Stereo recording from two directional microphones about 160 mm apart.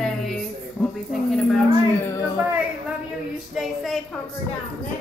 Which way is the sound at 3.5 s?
Centre (ahead or behind).